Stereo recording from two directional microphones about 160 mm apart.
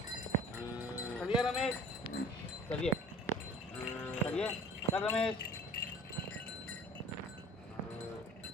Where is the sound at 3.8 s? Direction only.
10° left (ahead or behind).